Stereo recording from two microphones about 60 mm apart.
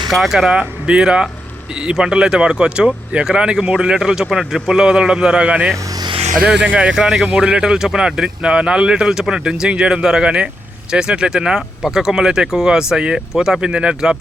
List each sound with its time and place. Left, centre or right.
0.1 s speech: centre
0.9 s speech: centre
6.9 s speech: centre